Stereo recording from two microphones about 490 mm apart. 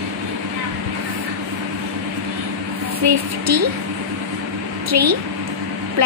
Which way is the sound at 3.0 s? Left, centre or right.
Right.